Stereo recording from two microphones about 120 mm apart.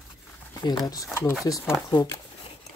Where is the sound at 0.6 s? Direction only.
35° left (ahead or behind).